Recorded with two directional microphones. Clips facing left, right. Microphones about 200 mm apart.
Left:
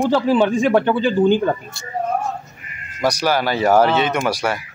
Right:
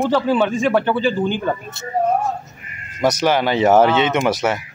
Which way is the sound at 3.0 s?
20° right (ahead or behind).